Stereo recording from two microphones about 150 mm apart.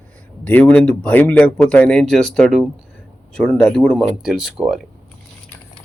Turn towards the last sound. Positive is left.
turn(degrees=-5)  # may be behind; listen again after turning